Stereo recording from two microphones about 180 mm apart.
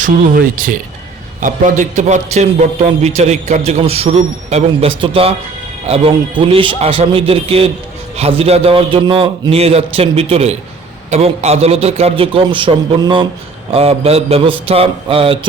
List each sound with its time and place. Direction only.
0.0 s a man's voice: 50° right (ahead or behind); by 15.4 s 30° right (ahead or behind)